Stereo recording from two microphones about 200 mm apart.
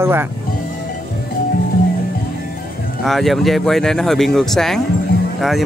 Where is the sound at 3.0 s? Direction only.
Centre (ahead or behind).